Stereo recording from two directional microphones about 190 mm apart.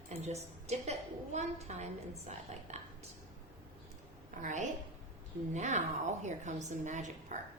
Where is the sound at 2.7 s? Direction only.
35° right (ahead or behind).